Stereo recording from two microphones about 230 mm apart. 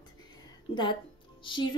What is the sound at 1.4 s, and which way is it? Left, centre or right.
Speech, left.